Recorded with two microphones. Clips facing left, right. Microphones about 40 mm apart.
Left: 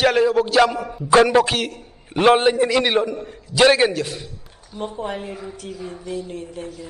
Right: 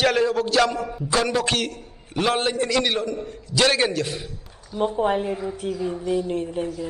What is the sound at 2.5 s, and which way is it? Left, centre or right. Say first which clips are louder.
A man's voice: left 4 dB; centre.